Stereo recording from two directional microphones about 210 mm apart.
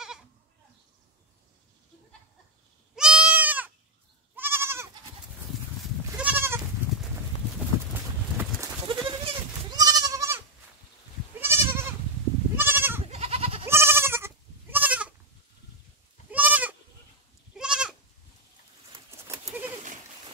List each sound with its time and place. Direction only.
3.0 s goat: 5° right (ahead or behind)
6.1 s goat: 10° right (ahead or behind)
8.8 s goat: 20° right (ahead or behind)
11.4 s goat: 10° right (ahead or behind)
13.0 s goat: 30° right (ahead or behind)
13.7 s goat: 10° right (ahead or behind)
16.3 s goat: 5° right (ahead or behind)